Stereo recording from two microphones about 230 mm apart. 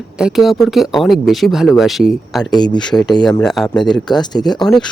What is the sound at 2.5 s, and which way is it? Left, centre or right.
Speech, centre.